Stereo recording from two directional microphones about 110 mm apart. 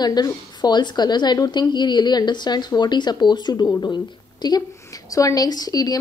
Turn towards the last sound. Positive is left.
turn(degrees=35)  # may be behind; listen again after turning